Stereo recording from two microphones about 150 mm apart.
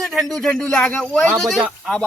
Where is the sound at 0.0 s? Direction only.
Centre (ahead or behind).